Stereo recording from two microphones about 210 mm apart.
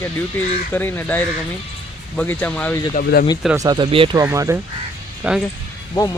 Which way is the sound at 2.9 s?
45° left (ahead or behind).